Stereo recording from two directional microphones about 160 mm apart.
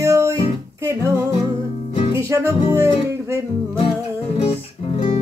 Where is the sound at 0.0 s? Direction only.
20° right (ahead or behind).